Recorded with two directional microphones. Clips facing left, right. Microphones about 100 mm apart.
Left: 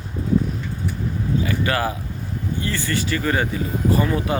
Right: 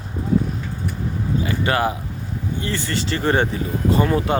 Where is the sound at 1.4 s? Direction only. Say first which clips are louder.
Right 3 dB; 25° right (ahead or behind).